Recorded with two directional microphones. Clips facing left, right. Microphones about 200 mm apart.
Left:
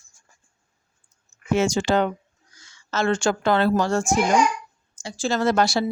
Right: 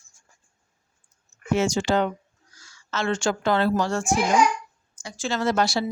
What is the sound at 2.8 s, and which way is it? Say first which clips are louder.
Speech: left 3 dB; 45° left (ahead or behind).